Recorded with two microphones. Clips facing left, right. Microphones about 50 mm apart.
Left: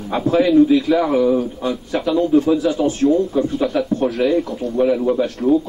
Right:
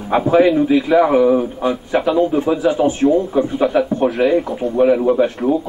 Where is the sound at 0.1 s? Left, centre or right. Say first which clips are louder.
Right 2 dB; right.